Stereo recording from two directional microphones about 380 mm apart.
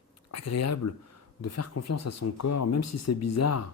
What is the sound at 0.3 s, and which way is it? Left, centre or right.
A man's voice, left.